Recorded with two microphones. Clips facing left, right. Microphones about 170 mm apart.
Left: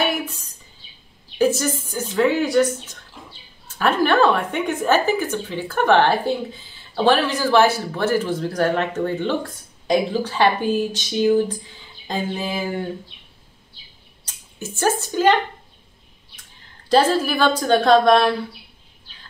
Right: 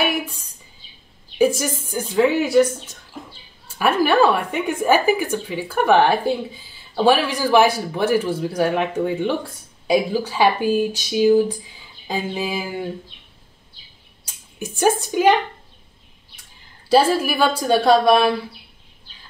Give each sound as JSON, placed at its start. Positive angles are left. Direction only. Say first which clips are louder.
{"t": 0.0, "sound": "a sound", "louder": "even", "side_deg": -10}
{"t": 1.4, "sound": "a man's voice", "louder": "right 1 dB", "side_deg": -10}
{"t": 3.6, "sound": "a man's voice", "louder": "right 1 dB", "side_deg": -10}
{"t": 14.2, "sound": "speech", "louder": "right 2 dB", "side_deg": -15}
{"t": 16.9, "sound": "a man's voice", "louder": "right 1 dB", "side_deg": -10}